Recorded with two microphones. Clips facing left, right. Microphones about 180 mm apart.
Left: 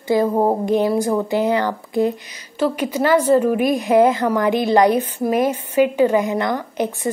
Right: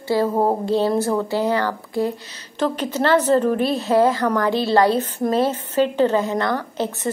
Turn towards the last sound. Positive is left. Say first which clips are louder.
# left 2 dB
turn(degrees=15)  # may be behind; listen again after turning